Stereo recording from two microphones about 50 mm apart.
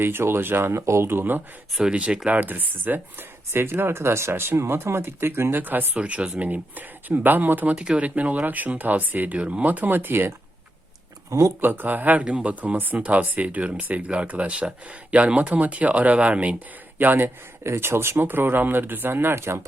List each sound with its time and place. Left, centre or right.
0.0 s speech: right
1.1 s speech: right
1.9 s speech: right
2.4 s speech: right
3.5 s speech: right
6.0 s speech: right
9.4 s speech: right
11.3 s speech: right
11.6 s speech: right
12.2 s speech: right
17.0 s speech: right